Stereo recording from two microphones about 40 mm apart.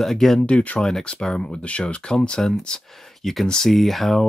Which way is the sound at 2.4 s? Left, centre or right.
Centre.